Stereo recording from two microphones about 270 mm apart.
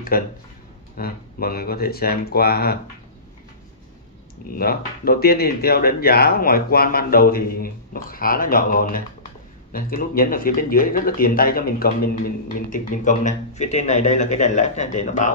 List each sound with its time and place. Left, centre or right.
0.1 s speech: left
4.5 s a man's voice: left